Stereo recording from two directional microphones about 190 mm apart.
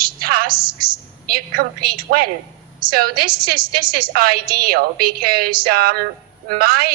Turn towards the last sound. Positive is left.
turn(degrees=-50)  # may be behind; listen again after turning